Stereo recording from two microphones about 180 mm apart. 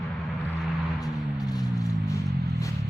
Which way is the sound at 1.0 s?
20° left (ahead or behind).